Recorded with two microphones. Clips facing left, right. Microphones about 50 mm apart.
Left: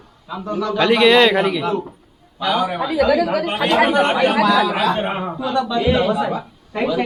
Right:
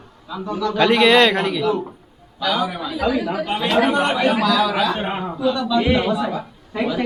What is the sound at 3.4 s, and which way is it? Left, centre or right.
Speech, left.